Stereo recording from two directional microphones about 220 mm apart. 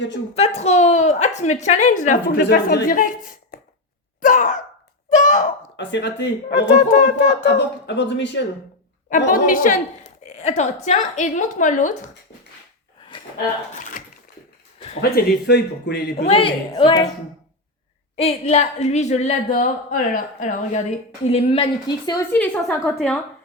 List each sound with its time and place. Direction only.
0.3 s a woman's voice: 30° left (ahead or behind)
2.4 s speech: 45° left (ahead or behind)
4.2 s a sound: 35° left (ahead or behind)
5.7 s speech: 55° left (ahead or behind)
6.7 s a woman's voice: 35° left (ahead or behind)
7.3 s speech: 50° left (ahead or behind)
9.0 s a woman's voice: 35° left (ahead or behind)
10.2 s a sound: 30° left (ahead or behind)
10.8 s a woman's voice: 35° left (ahead or behind)
13.7 s speech: 35° left (ahead or behind)
15.1 s speech: 50° left (ahead or behind)
16.1 s a woman's voice: 25° left (ahead or behind)
18.2 s a woman's voice: 30° left (ahead or behind); by 23.2 s 5° left (ahead or behind)